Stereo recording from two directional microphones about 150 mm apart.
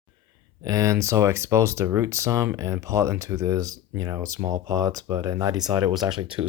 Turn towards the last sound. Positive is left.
turn(degrees=-30)  # may be behind; listen again after turning